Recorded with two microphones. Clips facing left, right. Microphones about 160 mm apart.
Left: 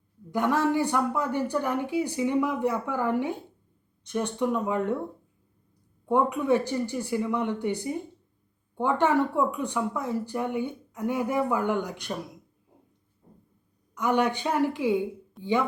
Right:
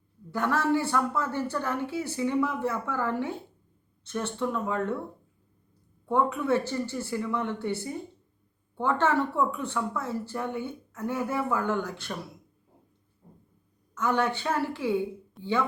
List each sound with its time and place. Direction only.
0.3 s speech: 15° left (ahead or behind)
6.1 s speech: 15° left (ahead or behind)
13.9 s speech: 15° left (ahead or behind)
15.4 s speech: centre (ahead or behind)